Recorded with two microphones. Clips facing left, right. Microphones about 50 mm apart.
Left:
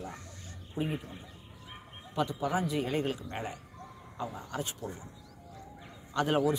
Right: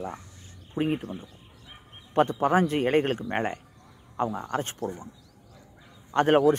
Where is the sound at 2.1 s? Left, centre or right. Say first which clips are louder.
Right 9 dB; right.